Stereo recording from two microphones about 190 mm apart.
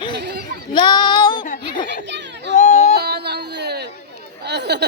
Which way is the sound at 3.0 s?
60° right (ahead or behind).